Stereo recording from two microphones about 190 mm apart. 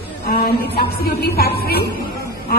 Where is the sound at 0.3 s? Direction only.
55° left (ahead or behind).